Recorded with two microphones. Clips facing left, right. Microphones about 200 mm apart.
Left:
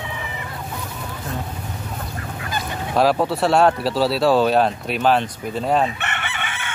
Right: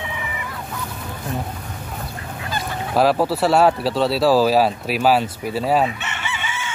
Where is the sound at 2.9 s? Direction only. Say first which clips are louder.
Right 1 dB; centre (ahead or behind).